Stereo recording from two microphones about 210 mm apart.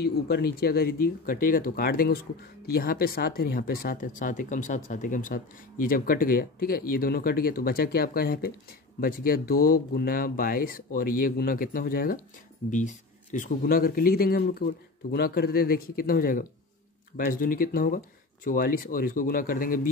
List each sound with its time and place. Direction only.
0.0 s speech: 50° left (ahead or behind)